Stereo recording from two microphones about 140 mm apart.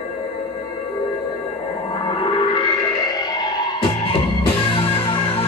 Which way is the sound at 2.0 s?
40° left (ahead or behind).